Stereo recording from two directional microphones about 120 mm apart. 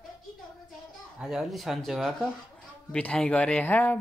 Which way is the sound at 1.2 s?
Centre (ahead or behind).